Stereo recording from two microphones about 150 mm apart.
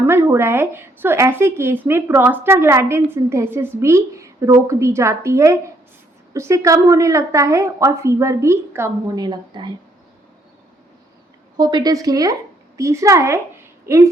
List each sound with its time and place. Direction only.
0.1 s a woman's voice: 15° right (ahead or behind)
9.2 s a woman's voice: 30° right (ahead or behind)
11.5 s a woman's voice: 25° right (ahead or behind)